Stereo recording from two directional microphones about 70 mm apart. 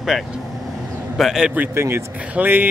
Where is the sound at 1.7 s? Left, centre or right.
Right.